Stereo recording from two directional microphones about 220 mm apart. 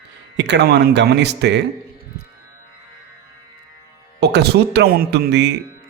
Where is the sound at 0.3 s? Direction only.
50° right (ahead or behind).